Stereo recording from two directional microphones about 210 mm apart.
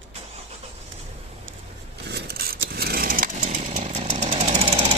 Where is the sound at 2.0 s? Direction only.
50° right (ahead or behind); by 4.9 s 25° right (ahead or behind).